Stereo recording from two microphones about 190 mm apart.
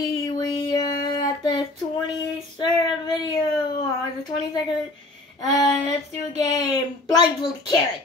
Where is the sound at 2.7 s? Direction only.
20° left (ahead or behind).